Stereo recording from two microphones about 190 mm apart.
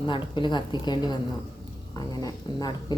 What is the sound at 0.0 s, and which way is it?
Speech, 25° left (ahead or behind).